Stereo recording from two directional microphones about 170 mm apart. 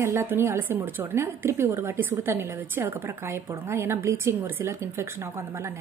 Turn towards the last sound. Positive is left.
turn(degrees=-15)  # may be behind; listen again after turning